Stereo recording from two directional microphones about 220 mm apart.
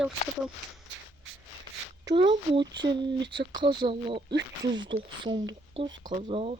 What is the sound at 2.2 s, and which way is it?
Speech, 20° right (ahead or behind).